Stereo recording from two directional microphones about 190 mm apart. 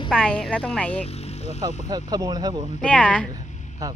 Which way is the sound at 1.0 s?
35° left (ahead or behind).